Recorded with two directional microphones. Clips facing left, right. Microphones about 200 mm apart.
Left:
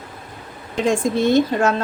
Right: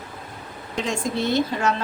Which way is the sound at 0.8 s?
50° left (ahead or behind).